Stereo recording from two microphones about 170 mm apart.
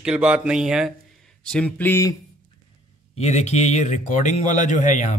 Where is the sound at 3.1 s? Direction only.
40° left (ahead or behind).